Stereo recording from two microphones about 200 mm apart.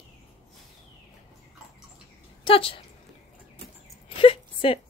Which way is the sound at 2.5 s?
25° left (ahead or behind).